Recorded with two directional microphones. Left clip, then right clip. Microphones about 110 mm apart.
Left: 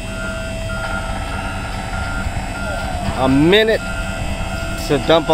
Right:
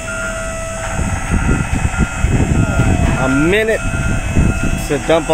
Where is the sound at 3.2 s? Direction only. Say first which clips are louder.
Left 2 dB; 10° left (ahead or behind).